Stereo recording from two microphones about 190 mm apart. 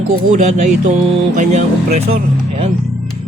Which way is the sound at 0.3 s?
40° right (ahead or behind).